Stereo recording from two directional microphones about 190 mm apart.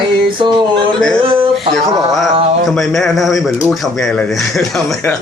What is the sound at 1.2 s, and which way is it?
Speech, 30° right (ahead or behind).